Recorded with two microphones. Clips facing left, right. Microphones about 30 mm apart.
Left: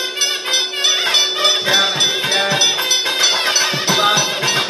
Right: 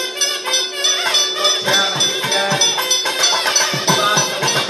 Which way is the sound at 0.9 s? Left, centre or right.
Centre.